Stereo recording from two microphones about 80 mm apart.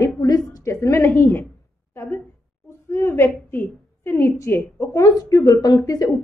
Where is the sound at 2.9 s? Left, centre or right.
Left.